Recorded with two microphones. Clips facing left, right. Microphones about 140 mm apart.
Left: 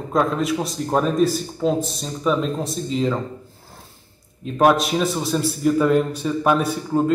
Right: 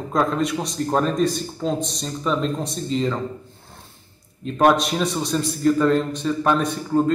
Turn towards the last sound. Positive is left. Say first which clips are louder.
# even
turn(degrees=5)  # may be behind; listen again after turning